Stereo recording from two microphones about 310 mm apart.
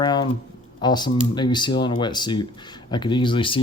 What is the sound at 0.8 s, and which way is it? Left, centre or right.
Speech, centre.